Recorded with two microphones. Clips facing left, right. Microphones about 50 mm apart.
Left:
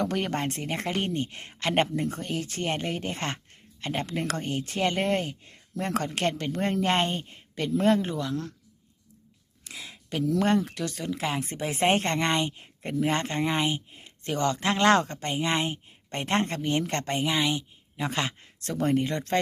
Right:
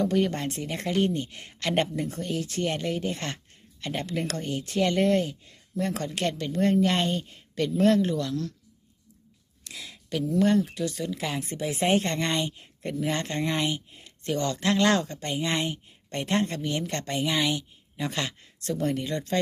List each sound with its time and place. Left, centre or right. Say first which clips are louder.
0.0 s speech: right 3 dB; left
9.6 s a sound: even; left
10.3 s speech: right 3 dB; left
10.9 s speech: left 1 dB; left
13.4 s speech: left 1 dB; centre
15.4 s speech: left 1 dB; left
17.2 s speech: right 2 dB; centre
17.9 s speech: left 1 dB; left